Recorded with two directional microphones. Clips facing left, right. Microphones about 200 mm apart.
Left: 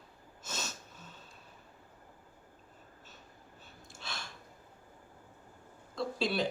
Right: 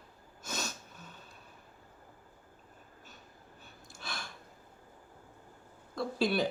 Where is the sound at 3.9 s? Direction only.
25° left (ahead or behind).